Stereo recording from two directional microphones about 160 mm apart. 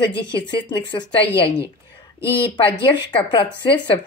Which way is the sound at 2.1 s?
30° left (ahead or behind).